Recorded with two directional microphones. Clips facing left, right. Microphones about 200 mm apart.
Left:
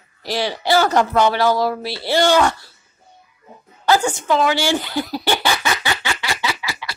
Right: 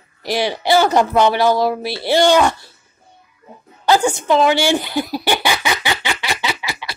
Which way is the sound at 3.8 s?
20° right (ahead or behind).